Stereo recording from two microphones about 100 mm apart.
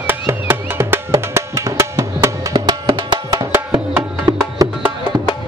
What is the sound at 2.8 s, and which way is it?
Music, 60° right (ahead or behind).